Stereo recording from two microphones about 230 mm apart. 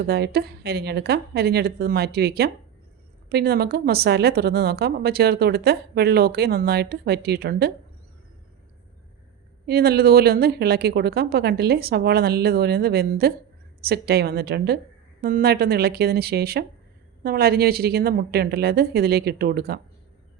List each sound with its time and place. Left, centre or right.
0.0 s speech: right
9.6 s speech: right